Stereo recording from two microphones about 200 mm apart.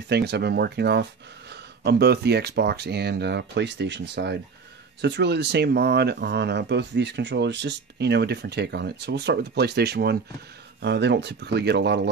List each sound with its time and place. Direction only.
0.1 s speech: 55° right (ahead or behind)